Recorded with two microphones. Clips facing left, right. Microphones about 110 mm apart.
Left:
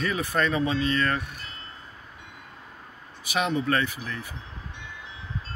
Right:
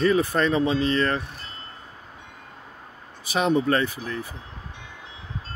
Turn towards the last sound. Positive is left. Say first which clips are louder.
# right 4 dB
turn(degrees=-35)  # may be behind; listen again after turning